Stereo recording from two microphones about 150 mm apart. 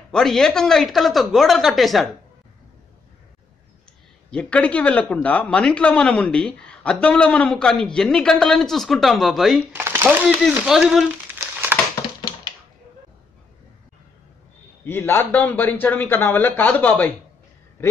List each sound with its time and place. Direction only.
0.1 s speech: 5° left (ahead or behind)
4.3 s a man's voice: 10° left (ahead or behind)
9.7 s speech: 15° right (ahead or behind)
11.4 s crumpling: 20° right (ahead or behind)
14.9 s a man's voice: 15° left (ahead or behind)